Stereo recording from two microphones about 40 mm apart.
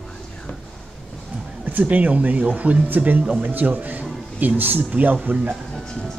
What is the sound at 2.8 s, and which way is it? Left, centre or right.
Speech, right.